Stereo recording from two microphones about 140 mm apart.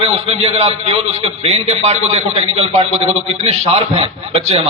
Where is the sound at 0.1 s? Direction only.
45° right (ahead or behind).